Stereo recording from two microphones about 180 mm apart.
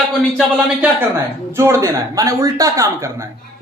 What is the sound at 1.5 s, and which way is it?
A man's voice, 15° right (ahead or behind).